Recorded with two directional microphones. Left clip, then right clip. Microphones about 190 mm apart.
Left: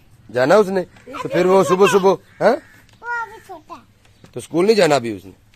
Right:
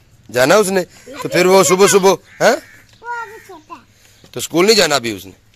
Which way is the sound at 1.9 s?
Centre (ahead or behind).